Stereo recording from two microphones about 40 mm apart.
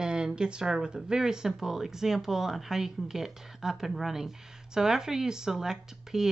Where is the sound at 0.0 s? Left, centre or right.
Right.